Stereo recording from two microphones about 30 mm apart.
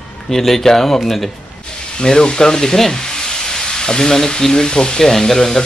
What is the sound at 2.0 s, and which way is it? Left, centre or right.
Speech, left.